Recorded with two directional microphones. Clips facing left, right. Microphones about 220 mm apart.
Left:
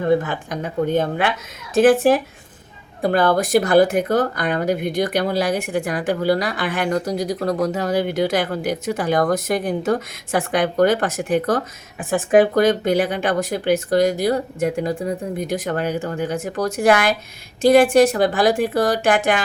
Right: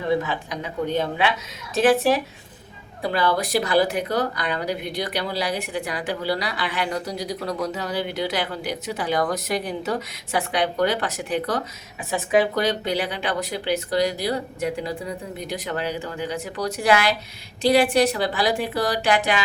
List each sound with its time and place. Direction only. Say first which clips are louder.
0.0 s a woman's voice: left 5 dB; 50° left (ahead or behind)